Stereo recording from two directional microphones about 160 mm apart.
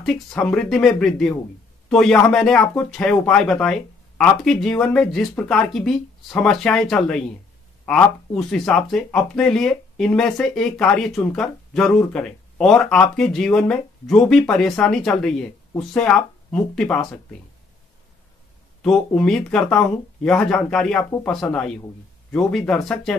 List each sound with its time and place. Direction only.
0.0 s speech: 5° left (ahead or behind)
18.8 s speech: 5° left (ahead or behind)
21.0 s speech: 15° left (ahead or behind)
21.3 s speech: 5° left (ahead or behind)